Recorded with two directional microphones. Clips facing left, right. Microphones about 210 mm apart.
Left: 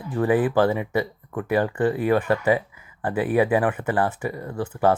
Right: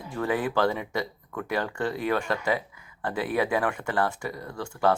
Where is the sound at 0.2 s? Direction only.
15° left (ahead or behind).